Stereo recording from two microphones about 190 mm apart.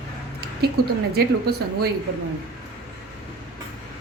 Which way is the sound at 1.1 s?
55° right (ahead or behind).